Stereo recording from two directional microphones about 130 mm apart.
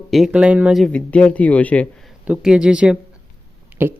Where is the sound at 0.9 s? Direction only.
10° left (ahead or behind).